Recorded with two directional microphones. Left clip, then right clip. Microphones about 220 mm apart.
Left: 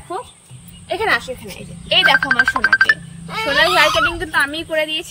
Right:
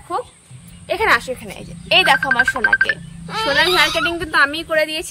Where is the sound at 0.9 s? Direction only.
10° right (ahead or behind).